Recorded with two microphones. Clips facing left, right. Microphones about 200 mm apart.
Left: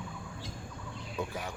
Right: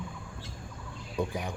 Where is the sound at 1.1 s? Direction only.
15° right (ahead or behind).